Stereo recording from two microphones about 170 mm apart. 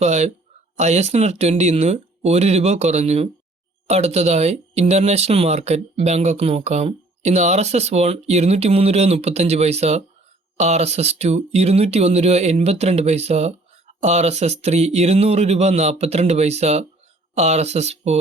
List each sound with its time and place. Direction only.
0.0 s speech: 40° right (ahead or behind)